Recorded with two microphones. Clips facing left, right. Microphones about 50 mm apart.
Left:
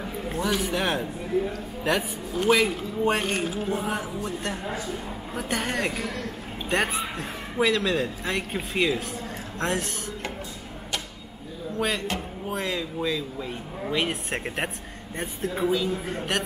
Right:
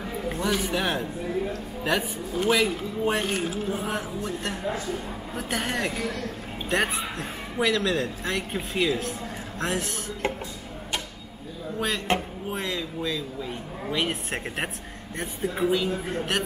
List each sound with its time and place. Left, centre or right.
0.0 s a woman's voice: centre
12.1 s speech: right
12.4 s a sound: centre
12.7 s a man's voice: centre